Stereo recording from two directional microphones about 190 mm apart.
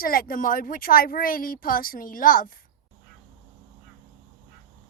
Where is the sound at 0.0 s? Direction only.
50° left (ahead or behind).